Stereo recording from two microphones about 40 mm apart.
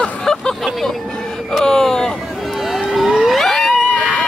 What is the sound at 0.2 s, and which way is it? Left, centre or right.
Vehicle, centre.